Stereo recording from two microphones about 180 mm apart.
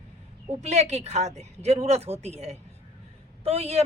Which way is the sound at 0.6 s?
40° right (ahead or behind).